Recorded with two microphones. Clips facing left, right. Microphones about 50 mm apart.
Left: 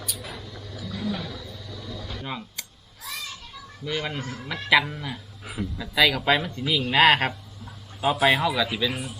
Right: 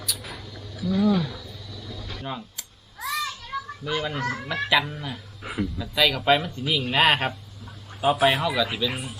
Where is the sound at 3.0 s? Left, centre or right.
Right.